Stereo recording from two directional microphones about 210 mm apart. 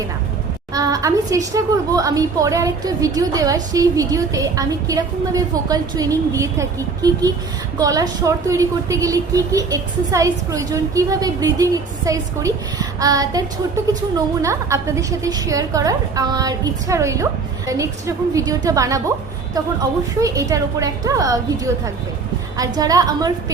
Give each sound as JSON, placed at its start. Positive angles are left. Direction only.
{"t": 0.7, "sound": "a woman's voice", "side_deg": -15}
{"t": 20.1, "sound": "a woman's voice", "side_deg": -15}